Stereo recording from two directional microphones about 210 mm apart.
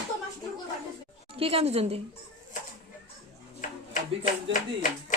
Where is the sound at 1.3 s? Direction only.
25° right (ahead or behind).